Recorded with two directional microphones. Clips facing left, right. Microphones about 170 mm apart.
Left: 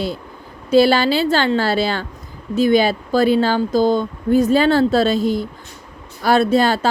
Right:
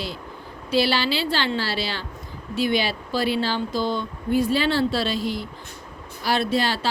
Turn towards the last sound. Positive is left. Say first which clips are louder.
# left 8 dB
turn(degrees=50)  # may be behind; listen again after turning